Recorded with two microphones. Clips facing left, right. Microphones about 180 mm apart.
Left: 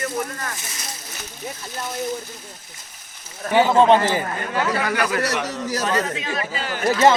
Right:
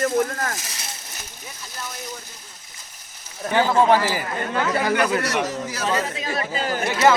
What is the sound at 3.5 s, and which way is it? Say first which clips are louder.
Speech: left 3 dB; 20° left (ahead or behind).